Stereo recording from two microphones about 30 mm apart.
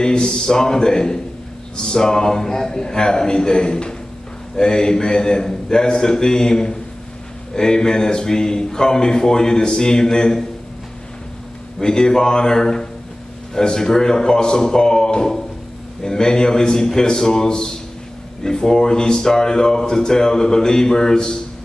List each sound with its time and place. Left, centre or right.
0.0 s speech: left
11.8 s speech: left